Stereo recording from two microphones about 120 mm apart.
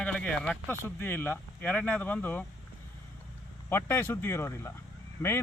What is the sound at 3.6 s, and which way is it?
Speech, 20° left (ahead or behind).